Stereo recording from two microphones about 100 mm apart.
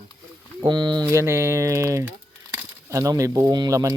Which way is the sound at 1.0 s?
30° right (ahead or behind).